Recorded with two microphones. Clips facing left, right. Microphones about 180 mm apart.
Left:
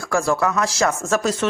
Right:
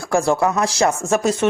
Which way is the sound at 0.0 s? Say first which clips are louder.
Right 3 dB; 30° right (ahead or behind).